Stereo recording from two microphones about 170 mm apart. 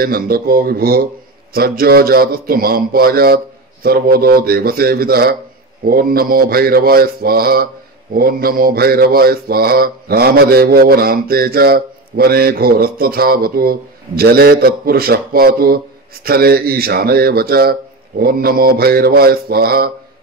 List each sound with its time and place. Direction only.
0.0 s mantra: 60° right (ahead or behind)